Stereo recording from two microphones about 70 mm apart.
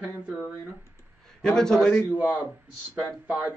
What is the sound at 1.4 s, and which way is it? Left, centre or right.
Speech, centre.